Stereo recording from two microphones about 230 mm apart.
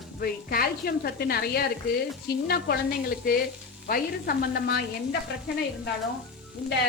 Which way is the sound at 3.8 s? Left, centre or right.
Left.